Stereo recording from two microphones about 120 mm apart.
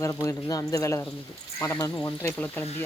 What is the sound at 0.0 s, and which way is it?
Speech, 25° left (ahead or behind).